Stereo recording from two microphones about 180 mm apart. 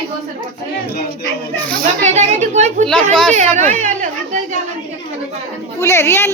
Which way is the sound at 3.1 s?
5° left (ahead or behind).